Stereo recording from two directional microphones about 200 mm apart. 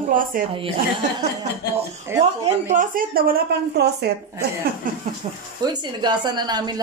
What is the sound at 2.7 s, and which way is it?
A woman's voice, 40° right (ahead or behind).